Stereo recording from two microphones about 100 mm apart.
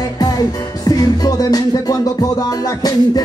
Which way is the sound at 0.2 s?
40° left (ahead or behind).